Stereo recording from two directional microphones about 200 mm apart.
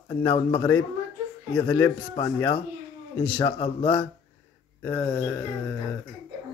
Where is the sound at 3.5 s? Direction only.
25° left (ahead or behind).